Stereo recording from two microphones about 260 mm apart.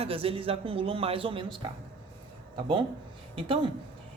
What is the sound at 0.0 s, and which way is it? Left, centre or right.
A woman's voice, right.